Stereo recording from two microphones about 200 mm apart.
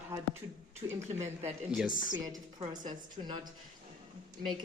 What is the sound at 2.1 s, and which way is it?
Speech, 20° right (ahead or behind).